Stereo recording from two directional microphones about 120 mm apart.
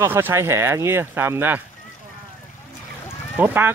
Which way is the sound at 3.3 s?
15° right (ahead or behind).